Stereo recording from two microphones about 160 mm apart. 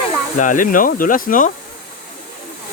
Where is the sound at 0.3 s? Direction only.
55° left (ahead or behind).